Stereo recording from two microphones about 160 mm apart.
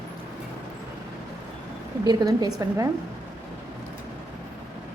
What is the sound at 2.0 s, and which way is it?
Speech, 25° right (ahead or behind).